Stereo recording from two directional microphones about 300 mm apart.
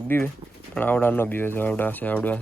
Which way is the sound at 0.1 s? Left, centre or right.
Centre.